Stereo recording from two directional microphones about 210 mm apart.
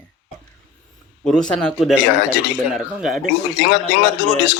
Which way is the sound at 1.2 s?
5° left (ahead or behind).